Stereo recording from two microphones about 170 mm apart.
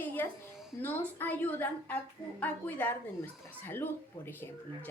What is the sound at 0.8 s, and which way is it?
A woman's voice, 10° left (ahead or behind).